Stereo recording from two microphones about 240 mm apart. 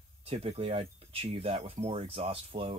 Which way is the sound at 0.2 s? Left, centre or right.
Right.